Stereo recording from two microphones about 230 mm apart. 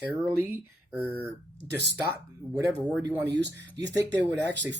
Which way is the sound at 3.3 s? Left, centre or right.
Right.